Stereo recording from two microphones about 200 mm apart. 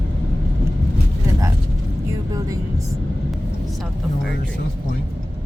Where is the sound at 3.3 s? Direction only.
Centre (ahead or behind).